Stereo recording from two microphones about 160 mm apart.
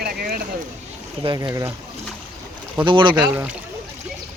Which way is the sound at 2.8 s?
30° right (ahead or behind).